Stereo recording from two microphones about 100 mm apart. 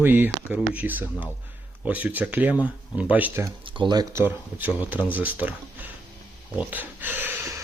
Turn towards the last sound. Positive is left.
turn(degrees=-20)  # may be behind; listen again after turning